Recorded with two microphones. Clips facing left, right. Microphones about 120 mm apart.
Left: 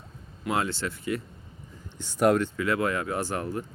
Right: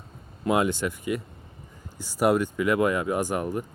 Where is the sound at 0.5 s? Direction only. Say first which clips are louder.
Right 5 dB; 15° right (ahead or behind).